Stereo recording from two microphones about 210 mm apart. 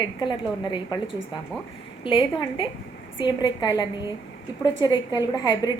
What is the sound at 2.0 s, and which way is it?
A woman's voice, 25° left (ahead or behind).